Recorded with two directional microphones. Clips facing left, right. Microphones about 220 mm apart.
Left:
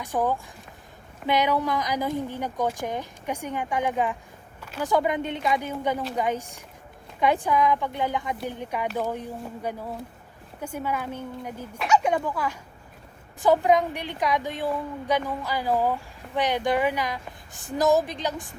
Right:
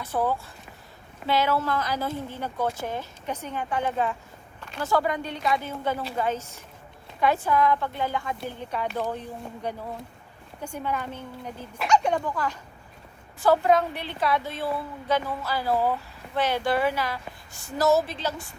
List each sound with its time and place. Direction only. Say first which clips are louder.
0.0 s a woman's voice: left 1 dB; 15° left (ahead or behind)
4.6 s a sound: left 2 dB; 5° left (ahead or behind)
4.9 s a woman's voice: left 2 dB; 20° left (ahead or behind)